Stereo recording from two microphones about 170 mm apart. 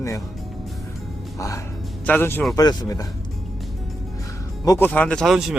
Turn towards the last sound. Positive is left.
turn(degrees=0)  # may be behind; listen again after turning